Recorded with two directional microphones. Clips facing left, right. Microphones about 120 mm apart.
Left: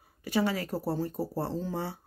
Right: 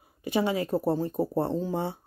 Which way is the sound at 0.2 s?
20° right (ahead or behind).